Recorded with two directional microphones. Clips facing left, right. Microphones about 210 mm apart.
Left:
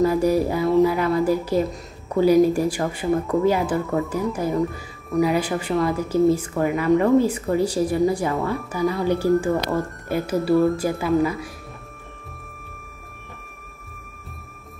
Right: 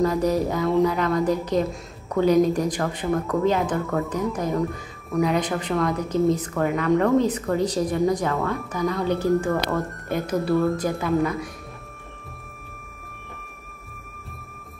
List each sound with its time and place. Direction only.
0.0 s speech: 10° left (ahead or behind)